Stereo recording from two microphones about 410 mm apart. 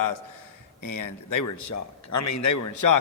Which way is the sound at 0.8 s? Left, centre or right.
Left.